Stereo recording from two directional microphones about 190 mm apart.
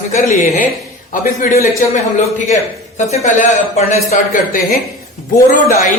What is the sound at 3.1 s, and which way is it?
Speech, 35° left (ahead or behind).